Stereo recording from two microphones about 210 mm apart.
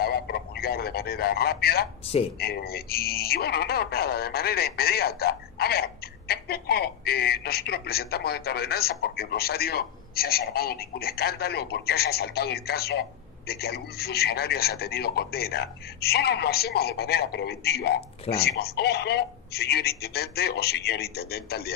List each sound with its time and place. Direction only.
0.0 s radio: 45° left (ahead or behind)
2.3 s speech: 45° left (ahead or behind)